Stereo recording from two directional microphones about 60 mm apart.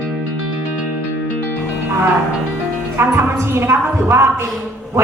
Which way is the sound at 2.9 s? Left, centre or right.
Right.